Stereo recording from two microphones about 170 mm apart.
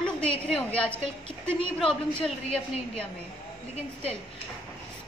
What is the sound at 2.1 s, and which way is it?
Speech, 5° left (ahead or behind).